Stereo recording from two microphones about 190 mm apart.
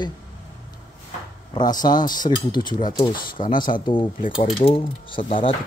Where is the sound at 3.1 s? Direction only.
45° left (ahead or behind).